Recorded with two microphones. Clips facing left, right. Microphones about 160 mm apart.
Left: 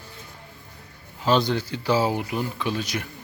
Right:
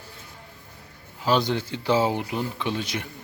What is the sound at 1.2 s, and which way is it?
Speech, 15° right (ahead or behind).